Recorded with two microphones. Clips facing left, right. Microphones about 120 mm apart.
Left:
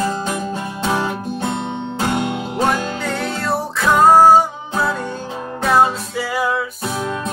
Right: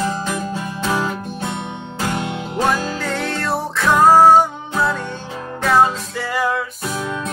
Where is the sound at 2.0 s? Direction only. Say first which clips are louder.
Left 2 dB; 25° left (ahead or behind).